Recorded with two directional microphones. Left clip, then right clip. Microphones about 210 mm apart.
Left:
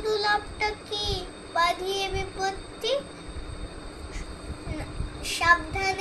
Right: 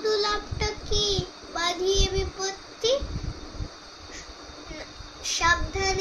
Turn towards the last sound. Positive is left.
turn(degrees=-10)  # may be behind; listen again after turning